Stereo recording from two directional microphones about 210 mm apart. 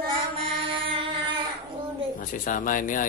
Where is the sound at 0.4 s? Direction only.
25° right (ahead or behind).